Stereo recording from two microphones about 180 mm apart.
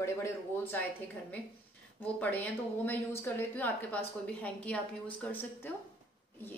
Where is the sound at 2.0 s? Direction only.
10° left (ahead or behind).